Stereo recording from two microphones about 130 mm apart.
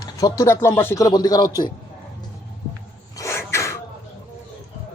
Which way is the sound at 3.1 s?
20° left (ahead or behind).